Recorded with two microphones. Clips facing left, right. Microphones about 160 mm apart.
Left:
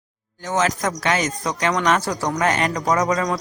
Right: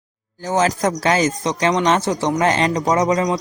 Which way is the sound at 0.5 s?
30° right (ahead or behind).